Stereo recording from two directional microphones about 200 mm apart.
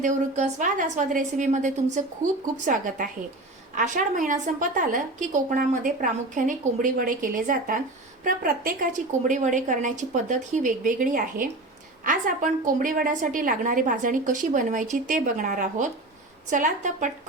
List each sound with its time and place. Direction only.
0.0 s a woman's voice: 35° right (ahead or behind)